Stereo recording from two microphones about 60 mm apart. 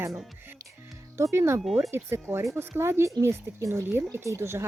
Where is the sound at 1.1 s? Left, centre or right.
Right.